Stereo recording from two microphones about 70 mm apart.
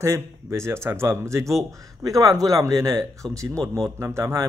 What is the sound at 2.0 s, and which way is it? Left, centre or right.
A man's voice, right.